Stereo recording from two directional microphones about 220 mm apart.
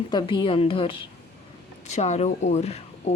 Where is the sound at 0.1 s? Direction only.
20° left (ahead or behind).